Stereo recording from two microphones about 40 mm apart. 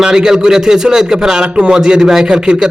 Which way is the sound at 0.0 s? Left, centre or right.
Centre.